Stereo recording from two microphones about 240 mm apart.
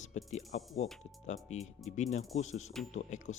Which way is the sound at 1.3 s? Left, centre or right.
Left.